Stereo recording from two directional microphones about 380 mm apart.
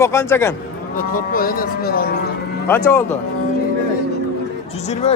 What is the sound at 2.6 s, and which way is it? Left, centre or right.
Speech, centre.